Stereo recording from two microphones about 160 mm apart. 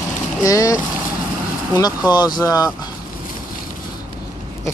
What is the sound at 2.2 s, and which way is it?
Speech, 25° left (ahead or behind).